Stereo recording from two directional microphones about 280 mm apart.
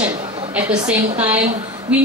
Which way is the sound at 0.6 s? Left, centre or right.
Centre.